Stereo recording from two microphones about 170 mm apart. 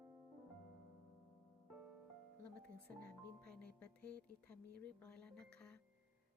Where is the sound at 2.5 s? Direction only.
65° right (ahead or behind).